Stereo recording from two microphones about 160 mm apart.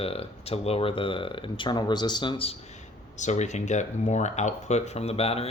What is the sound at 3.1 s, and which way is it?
Speech, 45° left (ahead or behind).